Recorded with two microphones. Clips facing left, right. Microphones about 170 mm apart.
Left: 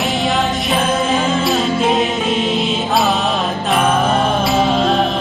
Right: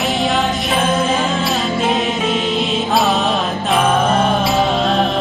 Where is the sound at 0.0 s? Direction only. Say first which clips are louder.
Even; centre (ahead or behind).